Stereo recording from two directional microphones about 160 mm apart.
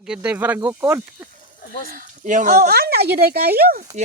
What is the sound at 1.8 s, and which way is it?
Speech, 55° right (ahead or behind).